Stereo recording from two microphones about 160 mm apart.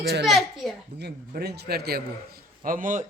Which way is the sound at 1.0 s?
85° right.